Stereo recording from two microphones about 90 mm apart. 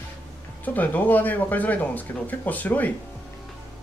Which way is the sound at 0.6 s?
20° left (ahead or behind).